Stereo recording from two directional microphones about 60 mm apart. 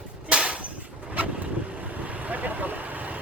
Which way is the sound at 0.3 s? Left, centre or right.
Centre.